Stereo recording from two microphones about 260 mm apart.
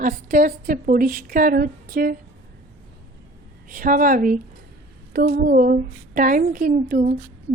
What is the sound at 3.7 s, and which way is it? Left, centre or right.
A woman's voice, right.